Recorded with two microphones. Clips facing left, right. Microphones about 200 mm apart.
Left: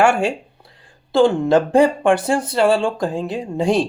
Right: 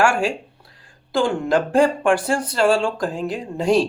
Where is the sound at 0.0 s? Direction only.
20° left (ahead or behind).